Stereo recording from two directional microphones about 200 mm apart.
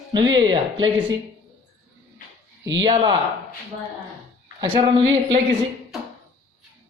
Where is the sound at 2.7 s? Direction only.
25° right (ahead or behind).